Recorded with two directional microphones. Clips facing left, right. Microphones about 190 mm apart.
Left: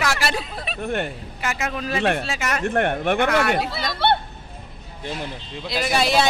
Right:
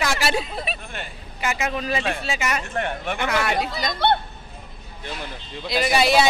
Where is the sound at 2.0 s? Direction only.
60° left (ahead or behind).